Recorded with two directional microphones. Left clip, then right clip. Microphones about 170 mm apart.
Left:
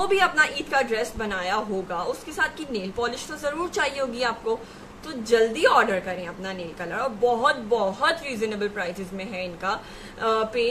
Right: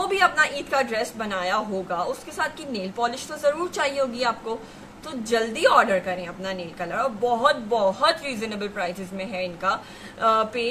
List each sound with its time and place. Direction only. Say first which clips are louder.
0.0 s a woman's voice: even; centre (ahead or behind)